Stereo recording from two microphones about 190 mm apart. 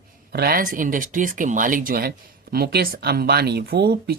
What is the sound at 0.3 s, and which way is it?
Speech, 55° right (ahead or behind).